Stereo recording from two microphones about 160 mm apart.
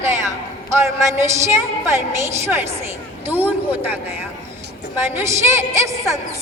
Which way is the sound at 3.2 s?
10° right (ahead or behind).